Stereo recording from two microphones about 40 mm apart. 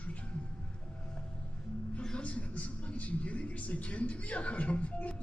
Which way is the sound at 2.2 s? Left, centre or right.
Left.